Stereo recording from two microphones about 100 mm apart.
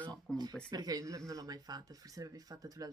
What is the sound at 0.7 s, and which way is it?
Speech, 40° right (ahead or behind).